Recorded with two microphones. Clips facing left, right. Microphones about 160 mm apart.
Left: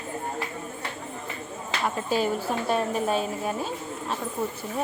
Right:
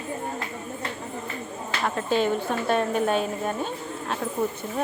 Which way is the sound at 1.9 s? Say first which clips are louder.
Right 2 dB; 5° left (ahead or behind).